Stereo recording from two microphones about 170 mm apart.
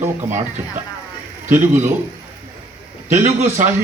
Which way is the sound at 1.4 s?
15° right (ahead or behind).